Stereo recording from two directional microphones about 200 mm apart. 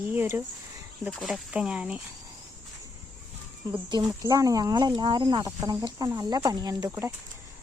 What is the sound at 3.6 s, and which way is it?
Speech, 20° right (ahead or behind).